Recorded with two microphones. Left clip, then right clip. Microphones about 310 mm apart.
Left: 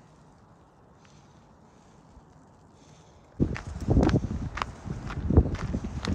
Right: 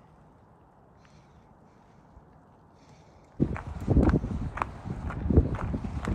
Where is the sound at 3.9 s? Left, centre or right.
Centre.